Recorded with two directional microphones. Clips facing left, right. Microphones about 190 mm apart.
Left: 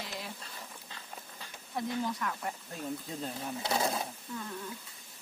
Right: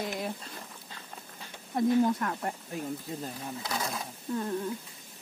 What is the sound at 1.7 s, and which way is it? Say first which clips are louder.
Speech: right 9 dB; 50° right (ahead or behind).